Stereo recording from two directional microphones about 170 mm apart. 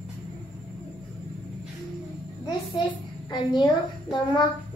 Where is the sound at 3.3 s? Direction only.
25° left (ahead or behind).